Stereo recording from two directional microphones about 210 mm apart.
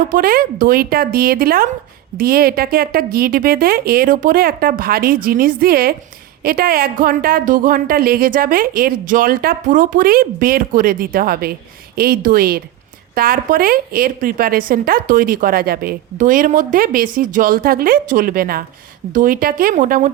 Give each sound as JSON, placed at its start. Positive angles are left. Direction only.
{"t": 0.0, "sound": "a woman's voice", "side_deg": -40}